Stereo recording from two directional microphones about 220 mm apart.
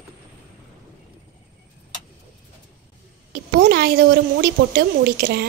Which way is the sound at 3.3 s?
45° right (ahead or behind).